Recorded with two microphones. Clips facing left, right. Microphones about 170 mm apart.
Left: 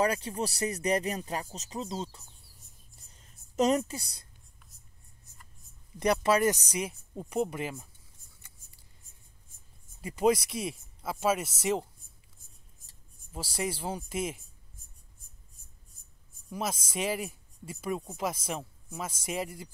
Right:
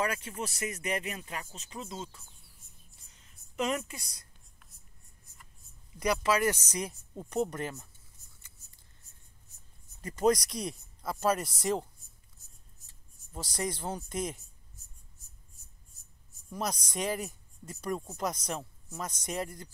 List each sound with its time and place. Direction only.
0.0 s speech: 35° left (ahead or behind)
3.5 s speech: 35° left (ahead or behind)
5.9 s speech: 30° left (ahead or behind)
7.2 s speech: 10° left (ahead or behind)
10.0 s speech: 5° left (ahead or behind)
13.3 s speech: 5° left (ahead or behind)
14.8 s a sound: 50° left (ahead or behind)
16.0 s writing: 55° left (ahead or behind)
16.4 s speech: 5° left (ahead or behind)